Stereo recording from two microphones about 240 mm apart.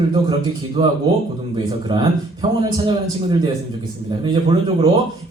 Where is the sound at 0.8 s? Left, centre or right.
Right.